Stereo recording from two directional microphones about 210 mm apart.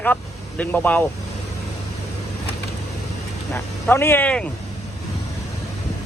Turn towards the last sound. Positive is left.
turn(degrees=5)  # may be behind; listen again after turning